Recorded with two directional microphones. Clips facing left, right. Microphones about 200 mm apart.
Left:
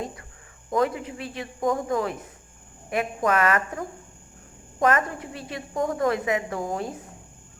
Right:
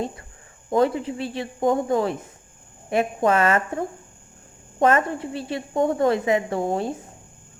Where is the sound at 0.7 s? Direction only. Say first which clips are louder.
Right 4 dB; 30° right (ahead or behind).